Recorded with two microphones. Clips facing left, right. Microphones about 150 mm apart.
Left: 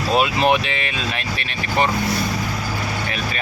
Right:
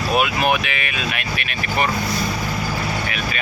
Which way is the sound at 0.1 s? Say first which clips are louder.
Left 2 dB; 30° left (ahead or behind).